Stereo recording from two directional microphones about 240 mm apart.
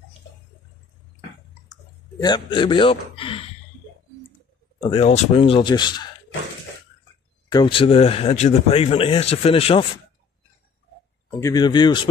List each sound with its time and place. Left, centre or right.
2.2 s speech: centre
4.7 s speech: left
7.5 s speech: left
11.3 s speech: centre